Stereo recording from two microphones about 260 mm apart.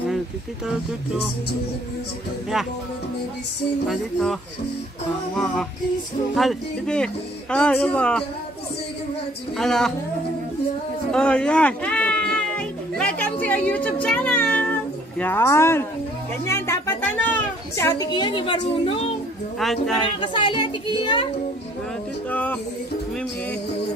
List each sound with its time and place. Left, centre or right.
3.9 s music: centre
9.6 s music: centre
11.1 s a sound: centre
16.4 s a woman's voice: centre
19.6 s music: centre
20.2 s speech: centre
22.3 s music: centre